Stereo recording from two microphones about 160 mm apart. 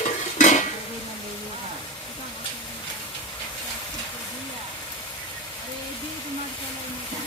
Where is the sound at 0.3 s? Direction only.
50° left (ahead or behind).